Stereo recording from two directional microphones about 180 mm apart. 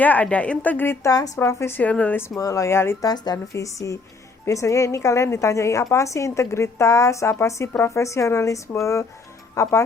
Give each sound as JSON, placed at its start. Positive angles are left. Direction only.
{"t": 0.0, "sound": "a woman's voice", "side_deg": 10}